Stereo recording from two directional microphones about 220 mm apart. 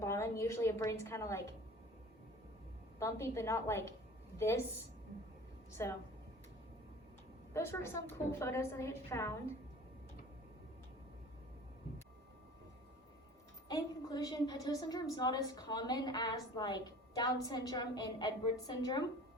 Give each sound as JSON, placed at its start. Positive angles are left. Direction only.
{"t": 0.0, "sound": "a woman's voice", "side_deg": 10}
{"t": 3.0, "sound": "a woman's voice", "side_deg": 10}
{"t": 5.8, "sound": "a woman's voice", "side_deg": 10}
{"t": 7.5, "sound": "a woman's voice", "side_deg": 10}
{"t": 13.7, "sound": "a woman's voice", "side_deg": 15}